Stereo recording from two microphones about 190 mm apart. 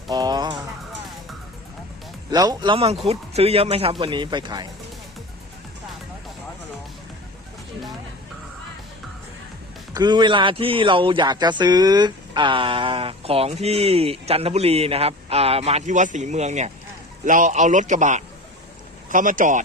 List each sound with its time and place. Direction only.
0.1 s music: 20° right (ahead or behind)
2.3 s speech: 20° right (ahead or behind)
9.9 s a man's voice: 20° right (ahead or behind); by 19.6 s 45° right (ahead or behind)